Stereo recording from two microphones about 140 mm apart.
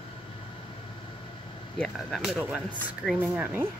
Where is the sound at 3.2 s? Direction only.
10° right (ahead or behind).